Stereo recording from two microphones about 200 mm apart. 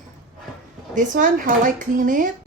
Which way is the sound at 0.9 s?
40° right (ahead or behind).